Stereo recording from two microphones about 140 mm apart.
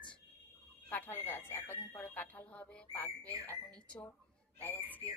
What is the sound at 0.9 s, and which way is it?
A woman's voice, 15° left (ahead or behind).